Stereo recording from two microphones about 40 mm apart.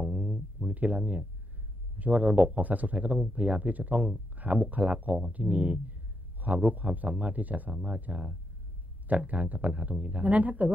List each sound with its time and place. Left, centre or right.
0.0 s a sound: right
0.7 s speech: right
7.7 s speech: right